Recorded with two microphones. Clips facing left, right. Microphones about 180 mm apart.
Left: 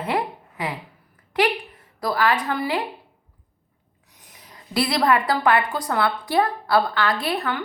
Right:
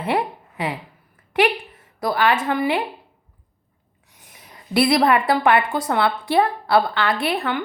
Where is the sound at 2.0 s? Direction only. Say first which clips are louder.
Right 2 dB; 25° right (ahead or behind).